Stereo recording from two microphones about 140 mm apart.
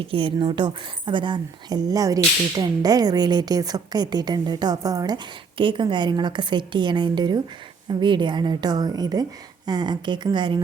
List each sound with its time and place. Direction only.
0.0 s a woman's voice: 40° right (ahead or behind)